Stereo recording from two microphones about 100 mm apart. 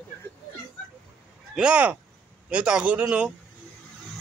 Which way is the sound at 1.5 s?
10° right (ahead or behind).